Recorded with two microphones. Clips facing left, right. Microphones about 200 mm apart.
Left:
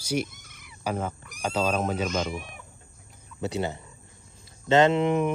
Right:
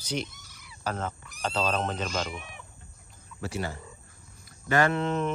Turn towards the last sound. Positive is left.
turn(degrees=15)  # may be behind; listen again after turning